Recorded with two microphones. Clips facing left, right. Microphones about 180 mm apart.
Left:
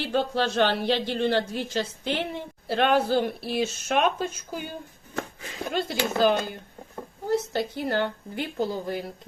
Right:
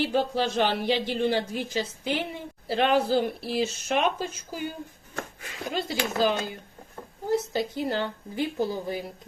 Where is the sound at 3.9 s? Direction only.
55° left (ahead or behind).